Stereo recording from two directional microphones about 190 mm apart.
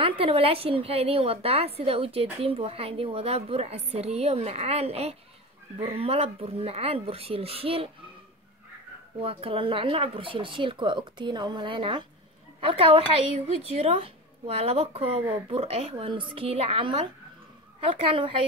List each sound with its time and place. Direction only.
0.2 s a woman's voice: 30° right (ahead or behind)
9.2 s a woman's voice: 30° right (ahead or behind)